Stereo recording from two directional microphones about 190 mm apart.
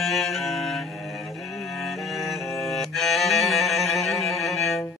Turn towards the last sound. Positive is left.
turn(degrees=0)  # may be behind; listen again after turning